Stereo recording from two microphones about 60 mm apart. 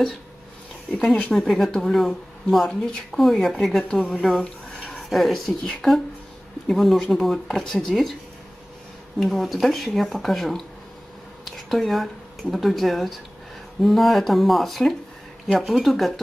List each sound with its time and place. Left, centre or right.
1.1 s speech: centre
4.4 s a sound: left
4.9 s speech: centre
9.2 s speech: centre